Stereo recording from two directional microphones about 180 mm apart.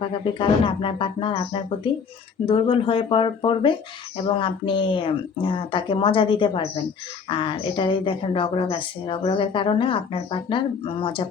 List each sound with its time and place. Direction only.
0.0 s speech: 30° left (ahead or behind)